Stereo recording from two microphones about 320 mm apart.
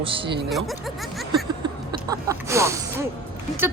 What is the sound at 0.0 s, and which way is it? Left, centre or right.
Speech, centre.